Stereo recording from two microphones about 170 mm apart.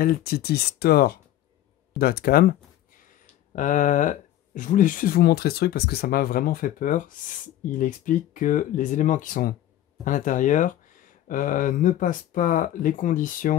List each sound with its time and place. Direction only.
0.0 s speech: 60° left (ahead or behind)
3.5 s speech: 50° left (ahead or behind)